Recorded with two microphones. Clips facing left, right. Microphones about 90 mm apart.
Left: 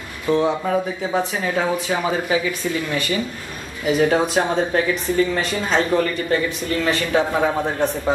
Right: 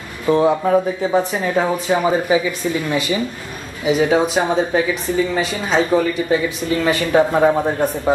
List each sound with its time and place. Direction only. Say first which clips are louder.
0.3 s speech: right 4 dB; 5° right (ahead or behind)